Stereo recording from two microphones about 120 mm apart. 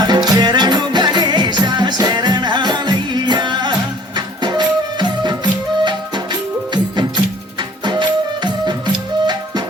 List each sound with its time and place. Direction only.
0.0 s music: 35° right (ahead or behind)